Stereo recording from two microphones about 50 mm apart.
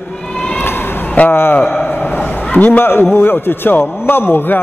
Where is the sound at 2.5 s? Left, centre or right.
Left.